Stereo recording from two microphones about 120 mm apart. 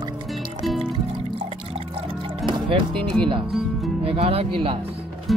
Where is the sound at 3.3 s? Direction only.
45° right (ahead or behind).